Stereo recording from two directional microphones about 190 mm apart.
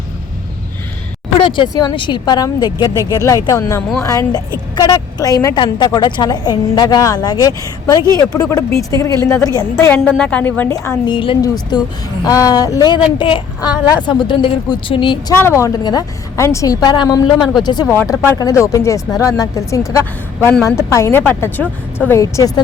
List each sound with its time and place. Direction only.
1.5 s a woman's voice: 25° left (ahead or behind)
9.8 s a woman's voice: 5° left (ahead or behind); by 15.4 s 25° left (ahead or behind)
15.4 s a woman's voice: 15° left (ahead or behind)